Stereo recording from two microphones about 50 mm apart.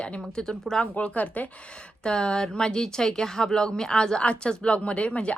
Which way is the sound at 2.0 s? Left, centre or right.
Centre.